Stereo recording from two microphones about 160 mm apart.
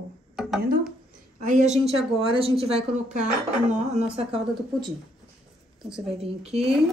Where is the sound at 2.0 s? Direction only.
35° right (ahead or behind).